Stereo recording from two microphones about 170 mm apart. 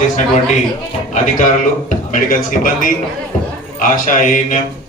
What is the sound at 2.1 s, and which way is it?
A man's voice, 50° left (ahead or behind).